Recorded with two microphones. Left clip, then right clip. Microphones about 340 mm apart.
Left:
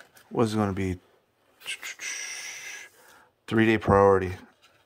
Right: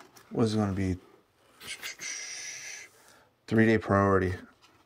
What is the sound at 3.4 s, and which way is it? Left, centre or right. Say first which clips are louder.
Speech: left 2 dB; centre.